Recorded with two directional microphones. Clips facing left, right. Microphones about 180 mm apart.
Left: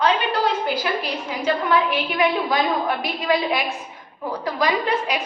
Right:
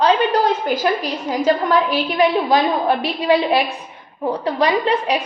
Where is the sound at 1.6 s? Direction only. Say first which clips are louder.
Right 3 dB; 35° right (ahead or behind).